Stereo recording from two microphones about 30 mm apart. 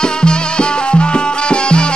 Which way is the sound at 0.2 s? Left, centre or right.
Left.